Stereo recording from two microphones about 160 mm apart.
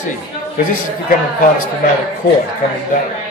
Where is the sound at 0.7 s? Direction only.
60° left (ahead or behind).